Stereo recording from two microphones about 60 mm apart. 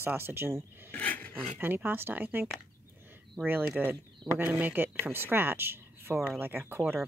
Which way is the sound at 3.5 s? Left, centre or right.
Right.